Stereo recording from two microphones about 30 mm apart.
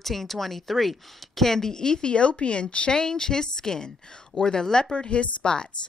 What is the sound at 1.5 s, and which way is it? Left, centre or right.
A woman's voice, centre.